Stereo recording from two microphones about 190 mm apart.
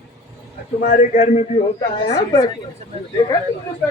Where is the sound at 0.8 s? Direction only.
45° left (ahead or behind).